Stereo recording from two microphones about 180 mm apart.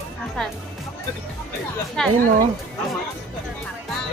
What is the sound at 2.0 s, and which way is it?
Speech, centre (ahead or behind).